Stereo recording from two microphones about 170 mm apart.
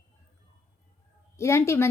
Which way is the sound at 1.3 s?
15° left (ahead or behind).